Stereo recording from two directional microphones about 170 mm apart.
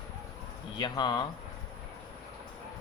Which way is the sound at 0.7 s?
25° left (ahead or behind).